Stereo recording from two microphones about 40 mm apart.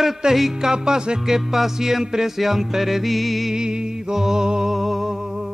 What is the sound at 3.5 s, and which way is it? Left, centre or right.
Music, centre.